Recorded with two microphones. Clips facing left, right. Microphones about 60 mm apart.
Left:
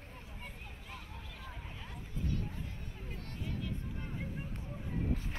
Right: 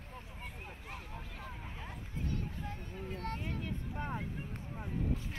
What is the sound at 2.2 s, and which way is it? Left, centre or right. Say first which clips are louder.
Vehicle: even; right.